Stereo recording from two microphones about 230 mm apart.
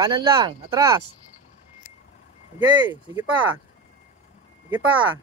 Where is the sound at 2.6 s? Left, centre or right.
Centre.